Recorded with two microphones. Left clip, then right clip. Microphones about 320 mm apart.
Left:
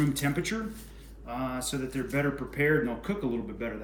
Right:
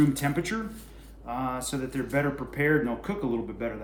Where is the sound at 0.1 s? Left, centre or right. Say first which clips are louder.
Right 2 dB; centre.